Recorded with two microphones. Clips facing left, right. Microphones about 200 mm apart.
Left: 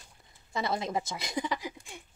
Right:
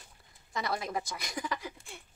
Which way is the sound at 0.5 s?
25° left (ahead or behind).